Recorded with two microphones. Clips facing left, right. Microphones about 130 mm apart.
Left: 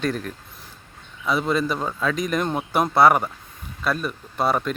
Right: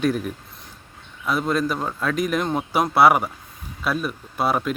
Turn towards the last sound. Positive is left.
turn(degrees=-5)  # may be behind; listen again after turning